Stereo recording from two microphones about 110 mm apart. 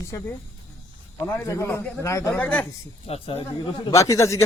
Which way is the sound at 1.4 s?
25° left (ahead or behind).